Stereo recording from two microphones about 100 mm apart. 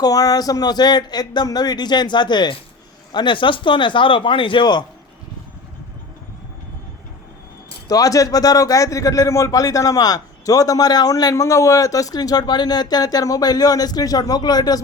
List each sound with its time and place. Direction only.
0.0 s speech: 40° left (ahead or behind)
7.9 s speech: 35° left (ahead or behind)